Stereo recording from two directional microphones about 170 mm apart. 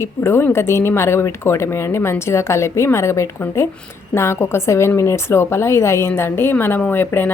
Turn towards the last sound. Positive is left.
turn(degrees=10)  # may be behind; listen again after turning